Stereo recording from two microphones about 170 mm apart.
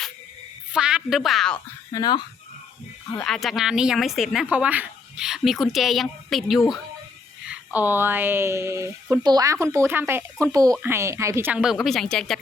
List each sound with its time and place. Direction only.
0.7 s a woman's voice: 5° right (ahead or behind)
1.9 s speech: 25° left (ahead or behind)
3.2 s speech: centre (ahead or behind)